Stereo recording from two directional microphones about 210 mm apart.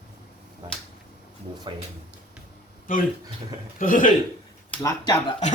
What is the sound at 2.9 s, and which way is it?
Speech, 40° left (ahead or behind).